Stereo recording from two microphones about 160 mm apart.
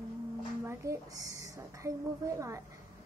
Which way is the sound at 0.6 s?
20° right (ahead or behind).